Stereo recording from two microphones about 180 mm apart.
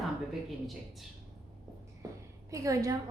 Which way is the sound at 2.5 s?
20° right (ahead or behind).